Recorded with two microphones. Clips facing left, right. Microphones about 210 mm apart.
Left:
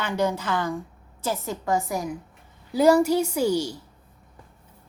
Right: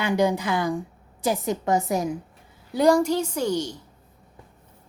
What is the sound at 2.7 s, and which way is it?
A woman's voice, 5° left (ahead or behind).